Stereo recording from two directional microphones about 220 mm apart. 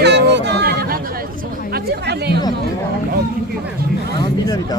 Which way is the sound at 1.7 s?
45° right (ahead or behind).